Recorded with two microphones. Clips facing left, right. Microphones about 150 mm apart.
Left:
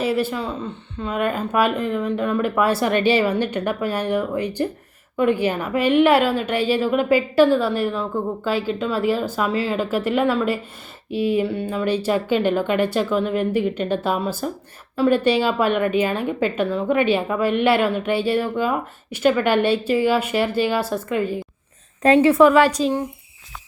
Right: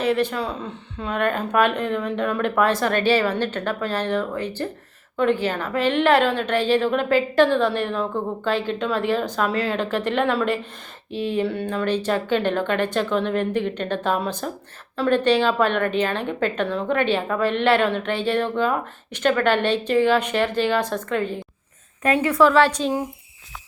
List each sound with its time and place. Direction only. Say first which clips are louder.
0.0 s a woman's voice: even; 5° left (ahead or behind)
22.0 s a woman's voice: left 5 dB; 25° left (ahead or behind); by 22.9 s 10° left (ahead or behind)